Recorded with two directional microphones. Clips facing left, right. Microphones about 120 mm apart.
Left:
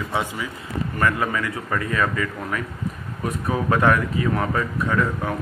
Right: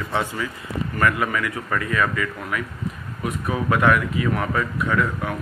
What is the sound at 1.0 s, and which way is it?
Speech, 30° left (ahead or behind).